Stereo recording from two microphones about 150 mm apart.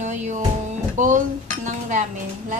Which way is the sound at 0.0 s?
55° right (ahead or behind).